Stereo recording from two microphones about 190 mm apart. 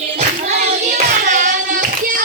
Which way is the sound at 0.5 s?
35° right (ahead or behind).